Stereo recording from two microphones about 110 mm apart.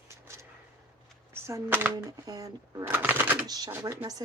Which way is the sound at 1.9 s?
35° right (ahead or behind).